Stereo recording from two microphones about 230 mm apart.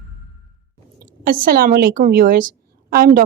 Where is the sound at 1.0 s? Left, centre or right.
Right.